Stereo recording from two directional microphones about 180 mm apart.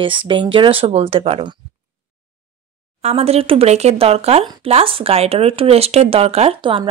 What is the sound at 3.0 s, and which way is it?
Speech, 35° right (ahead or behind).